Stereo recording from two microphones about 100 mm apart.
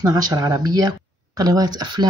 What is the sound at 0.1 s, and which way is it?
Speech, 40° right (ahead or behind).